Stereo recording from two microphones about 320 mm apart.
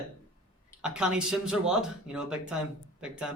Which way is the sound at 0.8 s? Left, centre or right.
Centre.